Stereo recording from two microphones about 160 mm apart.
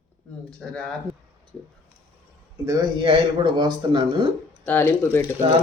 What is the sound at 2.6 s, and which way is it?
Speech, 20° right (ahead or behind).